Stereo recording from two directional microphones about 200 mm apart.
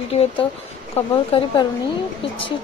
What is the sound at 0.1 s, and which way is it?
Speech, 30° left (ahead or behind).